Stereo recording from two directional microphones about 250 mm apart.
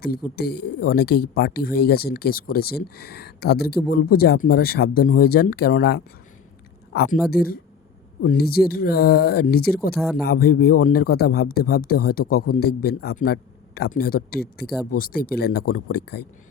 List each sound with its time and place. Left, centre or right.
0.3 s speech: left
9.9 s speech: centre
10.2 s speech: left